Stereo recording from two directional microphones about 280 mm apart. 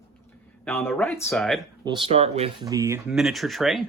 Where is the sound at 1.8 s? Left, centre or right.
Centre.